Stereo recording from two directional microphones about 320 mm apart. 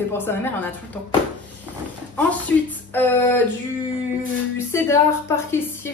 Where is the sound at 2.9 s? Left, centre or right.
Centre.